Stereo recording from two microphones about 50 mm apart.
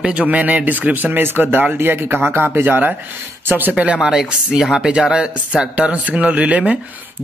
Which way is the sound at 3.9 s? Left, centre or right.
Centre.